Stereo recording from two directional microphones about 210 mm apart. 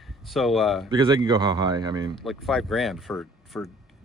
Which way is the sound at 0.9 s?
20° right (ahead or behind).